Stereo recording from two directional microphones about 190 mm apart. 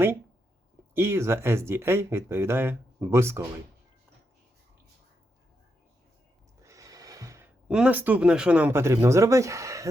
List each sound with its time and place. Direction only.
0.9 s speech: 15° right (ahead or behind)
6.6 s speech: 15° right (ahead or behind)